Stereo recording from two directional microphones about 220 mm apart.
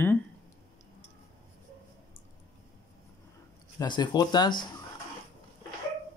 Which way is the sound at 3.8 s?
20° left (ahead or behind).